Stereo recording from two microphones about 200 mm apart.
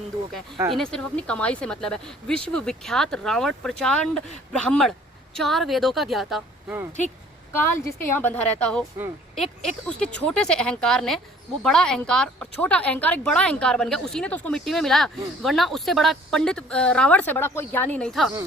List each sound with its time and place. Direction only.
0.5 s speech: 25° right (ahead or behind)
0.8 s a woman's voice: 5° left (ahead or behind)
7.5 s a woman's voice: 10° left (ahead or behind)